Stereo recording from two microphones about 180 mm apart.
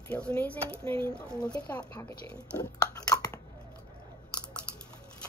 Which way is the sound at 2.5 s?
20° left (ahead or behind).